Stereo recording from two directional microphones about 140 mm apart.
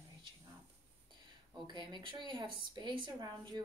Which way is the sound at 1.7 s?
35° right (ahead or behind).